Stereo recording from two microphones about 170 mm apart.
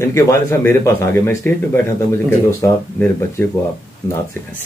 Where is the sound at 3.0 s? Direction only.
10° left (ahead or behind).